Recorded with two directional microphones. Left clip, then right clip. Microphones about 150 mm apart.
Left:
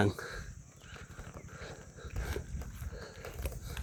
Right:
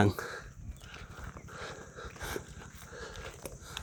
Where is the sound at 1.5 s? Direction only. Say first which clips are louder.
Right 7 dB; 45° right (ahead or behind).